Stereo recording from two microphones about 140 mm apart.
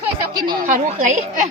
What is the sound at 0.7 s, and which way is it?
Speech, 55° right (ahead or behind).